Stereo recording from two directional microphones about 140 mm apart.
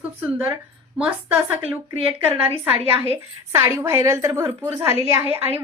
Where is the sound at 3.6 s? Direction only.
20° right (ahead or behind).